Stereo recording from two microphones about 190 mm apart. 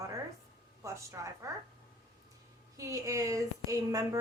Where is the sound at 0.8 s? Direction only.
15° right (ahead or behind).